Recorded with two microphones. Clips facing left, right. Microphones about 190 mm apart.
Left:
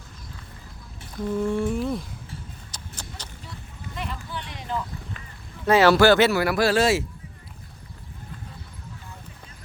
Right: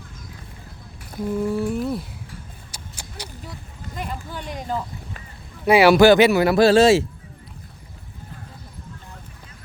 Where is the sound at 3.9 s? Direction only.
45° right (ahead or behind).